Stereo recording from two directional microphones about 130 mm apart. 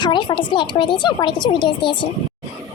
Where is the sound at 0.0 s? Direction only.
35° left (ahead or behind).